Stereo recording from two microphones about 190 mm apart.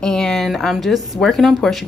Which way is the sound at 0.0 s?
Centre (ahead or behind).